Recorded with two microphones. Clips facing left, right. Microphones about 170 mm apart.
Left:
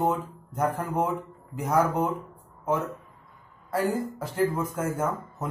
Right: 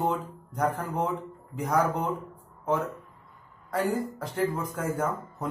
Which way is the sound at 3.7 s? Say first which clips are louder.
Left 1 dB; 5° left (ahead or behind).